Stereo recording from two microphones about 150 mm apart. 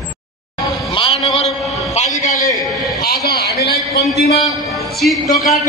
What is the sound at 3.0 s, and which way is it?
A man's voice, 90° left.